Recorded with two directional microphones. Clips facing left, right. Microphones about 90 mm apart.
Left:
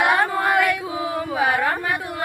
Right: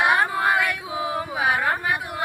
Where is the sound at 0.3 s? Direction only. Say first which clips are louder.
Left 3 dB; 10° right (ahead or behind).